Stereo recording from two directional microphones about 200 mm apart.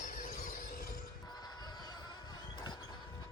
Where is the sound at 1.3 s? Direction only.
20° left (ahead or behind).